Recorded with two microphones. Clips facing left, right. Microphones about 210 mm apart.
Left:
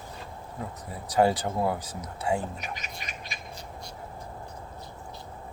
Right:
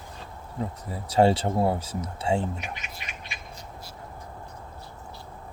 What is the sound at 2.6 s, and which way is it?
Speech, 40° left (ahead or behind).